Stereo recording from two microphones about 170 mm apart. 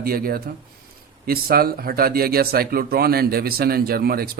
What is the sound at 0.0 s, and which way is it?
A man's voice, 60° right (ahead or behind).